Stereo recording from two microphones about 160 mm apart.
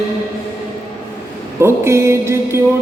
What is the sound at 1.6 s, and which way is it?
Music, 15° right (ahead or behind).